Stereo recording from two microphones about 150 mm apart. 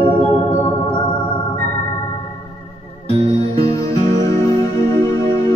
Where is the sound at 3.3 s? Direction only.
40° right (ahead or behind).